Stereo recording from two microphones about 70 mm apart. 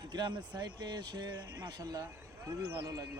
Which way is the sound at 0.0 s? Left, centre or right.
Right.